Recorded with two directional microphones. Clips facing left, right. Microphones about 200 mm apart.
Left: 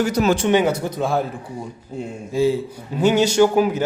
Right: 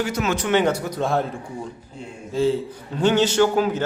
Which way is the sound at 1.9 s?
45° left (ahead or behind).